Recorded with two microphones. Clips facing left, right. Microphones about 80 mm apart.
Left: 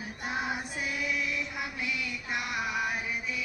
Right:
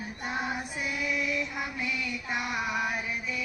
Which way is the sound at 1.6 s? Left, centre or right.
Centre.